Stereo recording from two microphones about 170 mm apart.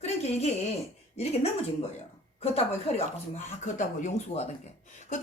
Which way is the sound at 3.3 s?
45° left (ahead or behind).